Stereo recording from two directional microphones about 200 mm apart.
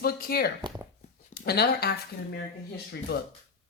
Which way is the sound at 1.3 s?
55° left (ahead or behind).